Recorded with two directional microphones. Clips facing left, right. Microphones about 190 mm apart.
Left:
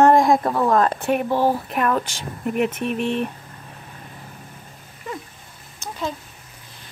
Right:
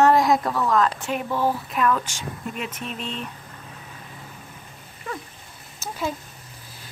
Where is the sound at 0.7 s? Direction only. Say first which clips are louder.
Left 3 dB; 50° left (ahead or behind).